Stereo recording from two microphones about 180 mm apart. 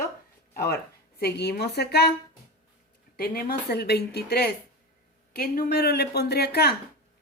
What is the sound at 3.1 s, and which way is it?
Speech, 55° left (ahead or behind).